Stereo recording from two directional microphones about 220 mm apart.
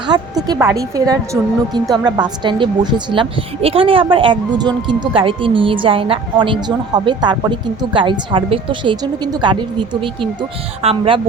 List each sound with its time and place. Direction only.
0.1 s speech: 20° right (ahead or behind)